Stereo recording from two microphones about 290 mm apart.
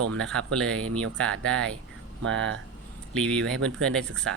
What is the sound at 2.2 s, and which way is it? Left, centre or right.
Speech, right.